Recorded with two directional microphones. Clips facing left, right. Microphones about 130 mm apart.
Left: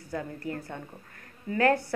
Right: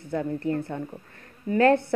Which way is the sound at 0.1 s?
25° right (ahead or behind).